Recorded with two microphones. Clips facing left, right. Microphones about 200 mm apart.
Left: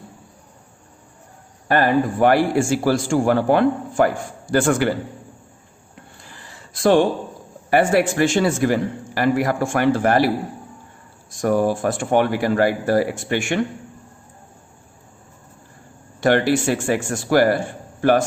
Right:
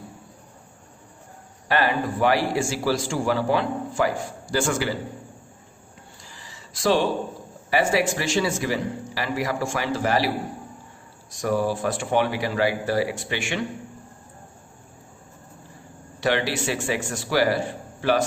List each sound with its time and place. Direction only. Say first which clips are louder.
1.6 s a man's voice: left 6 dB; 50° left (ahead or behind)
6.2 s a sound: left 2 dB; 55° left (ahead or behind)
7.7 s a man's voice: left 5 dB; 55° left (ahead or behind)
16.2 s a man's voice: left 7 dB; 50° left (ahead or behind)